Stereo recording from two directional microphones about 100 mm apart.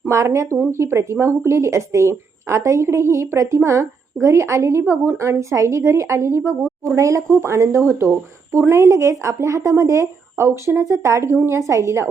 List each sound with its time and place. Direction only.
0.0 s speech: 30° right (ahead or behind)